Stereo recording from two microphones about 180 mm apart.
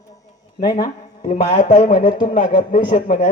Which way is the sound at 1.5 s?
45° left (ahead or behind).